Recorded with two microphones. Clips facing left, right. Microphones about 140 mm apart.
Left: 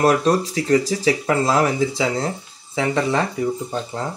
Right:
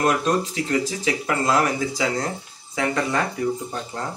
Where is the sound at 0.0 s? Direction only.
35° left (ahead or behind).